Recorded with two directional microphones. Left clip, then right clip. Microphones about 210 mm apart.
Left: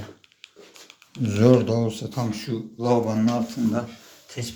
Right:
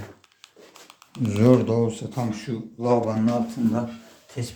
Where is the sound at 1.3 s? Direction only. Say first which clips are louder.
Left 1 dB; 10° right (ahead or behind).